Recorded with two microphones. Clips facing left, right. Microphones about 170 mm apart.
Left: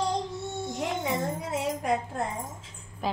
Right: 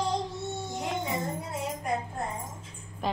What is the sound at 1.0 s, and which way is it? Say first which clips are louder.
Music: left 3 dB; 90° left.